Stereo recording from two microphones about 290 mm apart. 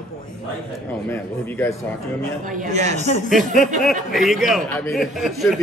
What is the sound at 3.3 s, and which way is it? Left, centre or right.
Speech, centre.